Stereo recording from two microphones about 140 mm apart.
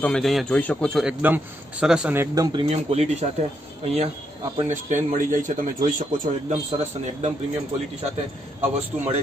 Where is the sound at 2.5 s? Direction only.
45° right (ahead or behind).